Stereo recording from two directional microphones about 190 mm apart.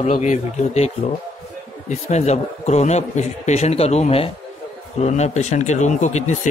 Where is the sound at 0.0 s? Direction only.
35° left (ahead or behind).